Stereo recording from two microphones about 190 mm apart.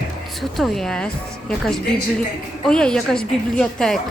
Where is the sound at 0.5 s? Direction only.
Centre (ahead or behind).